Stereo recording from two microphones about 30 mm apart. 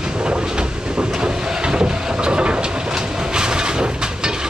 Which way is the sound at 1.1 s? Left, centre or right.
Right.